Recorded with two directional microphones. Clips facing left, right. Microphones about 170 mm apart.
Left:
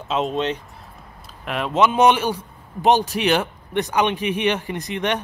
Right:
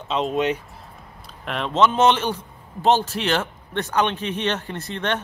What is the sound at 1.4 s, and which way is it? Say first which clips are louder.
A man's voice: left 1 dB; 5° left (ahead or behind).